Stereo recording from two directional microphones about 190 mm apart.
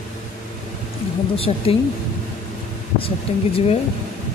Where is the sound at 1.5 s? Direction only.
30° left (ahead or behind).